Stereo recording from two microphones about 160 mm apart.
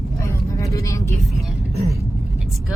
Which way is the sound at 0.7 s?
20° left (ahead or behind).